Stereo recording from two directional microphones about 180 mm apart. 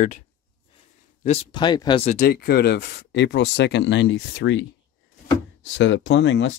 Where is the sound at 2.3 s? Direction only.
60° left (ahead or behind); by 4.6 s 80° left.